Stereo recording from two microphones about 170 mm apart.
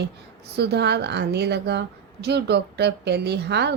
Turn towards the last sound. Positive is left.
turn(degrees=-80)